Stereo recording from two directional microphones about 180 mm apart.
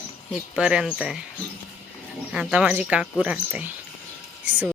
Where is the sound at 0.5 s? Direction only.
5° right (ahead or behind).